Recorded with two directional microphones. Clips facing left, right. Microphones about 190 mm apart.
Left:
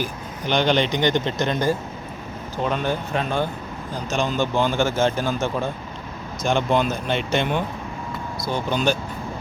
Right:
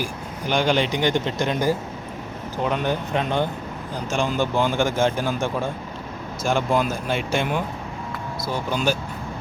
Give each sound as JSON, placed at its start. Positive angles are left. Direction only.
{"t": 0.0, "sound": "speech", "side_deg": -10}